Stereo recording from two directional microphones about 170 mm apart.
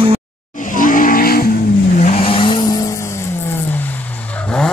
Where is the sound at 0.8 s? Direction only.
55° left (ahead or behind).